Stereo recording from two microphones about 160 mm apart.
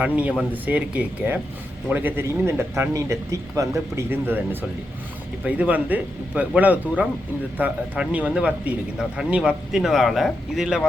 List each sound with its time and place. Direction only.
0.2 s speech: 10° right (ahead or behind)
5.5 s speech: 10° right (ahead or behind)